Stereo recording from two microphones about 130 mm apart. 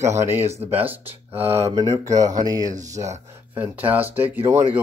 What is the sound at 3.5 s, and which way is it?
Speech, 15° right (ahead or behind).